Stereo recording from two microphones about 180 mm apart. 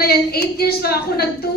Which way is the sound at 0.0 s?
60° left (ahead or behind).